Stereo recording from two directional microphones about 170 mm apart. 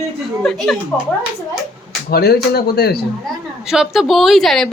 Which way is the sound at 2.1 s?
65° left (ahead or behind).